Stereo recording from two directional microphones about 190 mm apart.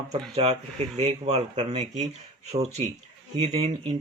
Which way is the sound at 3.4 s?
35° right (ahead or behind).